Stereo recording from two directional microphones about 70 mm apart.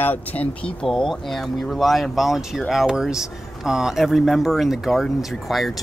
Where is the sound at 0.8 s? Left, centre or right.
Centre.